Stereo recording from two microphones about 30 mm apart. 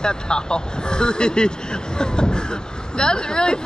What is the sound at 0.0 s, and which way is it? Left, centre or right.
Speech, left.